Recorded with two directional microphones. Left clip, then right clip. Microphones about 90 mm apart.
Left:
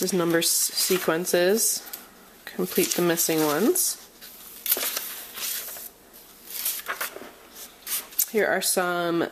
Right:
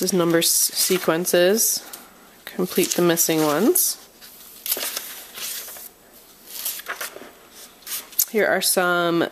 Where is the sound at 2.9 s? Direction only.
35° right (ahead or behind).